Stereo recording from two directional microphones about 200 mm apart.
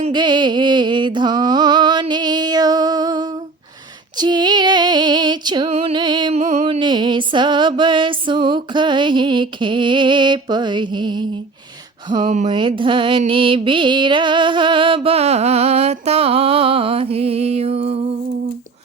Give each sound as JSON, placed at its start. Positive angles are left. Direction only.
{"t": 0.0, "sound": "music", "side_deg": -20}
{"t": 4.2, "sound": "female singing", "side_deg": -20}
{"t": 6.4, "sound": "music", "side_deg": -35}
{"t": 6.7, "sound": "music", "side_deg": -20}
{"t": 12.5, "sound": "music", "side_deg": -25}